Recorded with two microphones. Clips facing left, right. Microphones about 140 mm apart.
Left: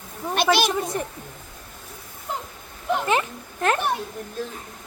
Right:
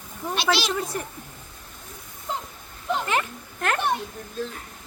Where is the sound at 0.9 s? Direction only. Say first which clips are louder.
Left 3 dB; 25° left (ahead or behind).